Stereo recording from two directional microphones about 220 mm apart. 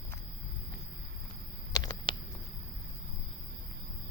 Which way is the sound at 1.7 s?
20° left (ahead or behind).